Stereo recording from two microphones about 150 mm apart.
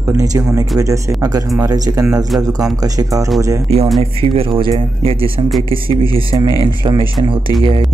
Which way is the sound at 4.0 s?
40° right (ahead or behind).